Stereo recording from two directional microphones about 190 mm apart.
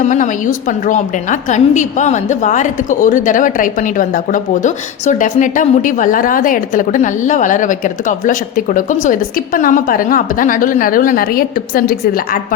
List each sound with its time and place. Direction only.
0.0 s a woman's voice: 40° left (ahead or behind)